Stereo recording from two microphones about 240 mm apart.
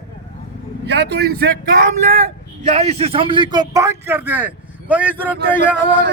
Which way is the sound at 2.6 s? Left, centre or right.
Right.